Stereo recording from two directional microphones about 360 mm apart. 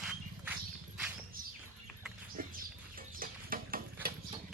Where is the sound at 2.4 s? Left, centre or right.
Right.